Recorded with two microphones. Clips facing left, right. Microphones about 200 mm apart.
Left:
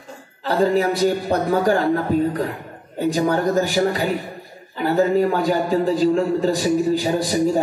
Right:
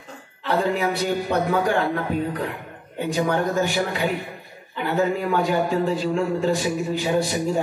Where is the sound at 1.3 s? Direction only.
40° left (ahead or behind).